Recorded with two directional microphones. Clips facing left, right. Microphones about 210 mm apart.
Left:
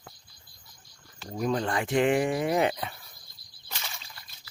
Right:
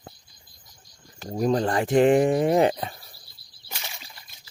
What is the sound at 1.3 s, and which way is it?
Speech, 35° right (ahead or behind).